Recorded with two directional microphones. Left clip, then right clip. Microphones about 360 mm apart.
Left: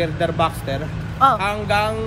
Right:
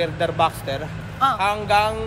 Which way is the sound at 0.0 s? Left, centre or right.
Centre.